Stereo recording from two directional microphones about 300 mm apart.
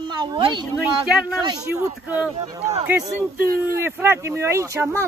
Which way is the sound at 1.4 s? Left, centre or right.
Centre.